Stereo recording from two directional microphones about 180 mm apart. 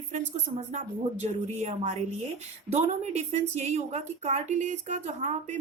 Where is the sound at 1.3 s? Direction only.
35° right (ahead or behind).